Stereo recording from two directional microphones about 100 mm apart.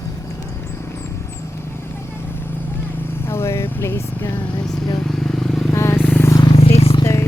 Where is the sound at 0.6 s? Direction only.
25° left (ahead or behind).